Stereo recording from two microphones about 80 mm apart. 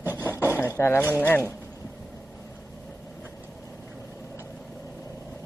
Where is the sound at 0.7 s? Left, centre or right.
Left.